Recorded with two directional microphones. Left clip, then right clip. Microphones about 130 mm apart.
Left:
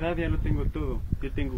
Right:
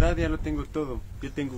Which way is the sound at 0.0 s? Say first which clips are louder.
Right 3 dB; 50° right (ahead or behind).